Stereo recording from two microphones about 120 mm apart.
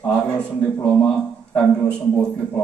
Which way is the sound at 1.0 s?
10° left (ahead or behind).